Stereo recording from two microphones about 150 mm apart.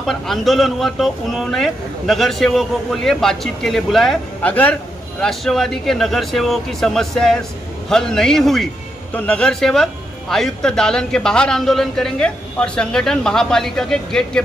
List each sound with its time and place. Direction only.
0.0 s speech: centre (ahead or behind)